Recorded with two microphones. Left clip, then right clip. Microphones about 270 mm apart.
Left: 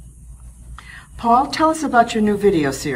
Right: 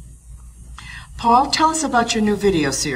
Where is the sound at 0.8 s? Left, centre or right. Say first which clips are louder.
Right 2 dB; centre.